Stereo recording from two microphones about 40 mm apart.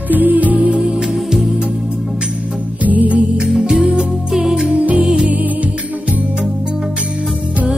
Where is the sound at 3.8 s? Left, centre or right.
Right.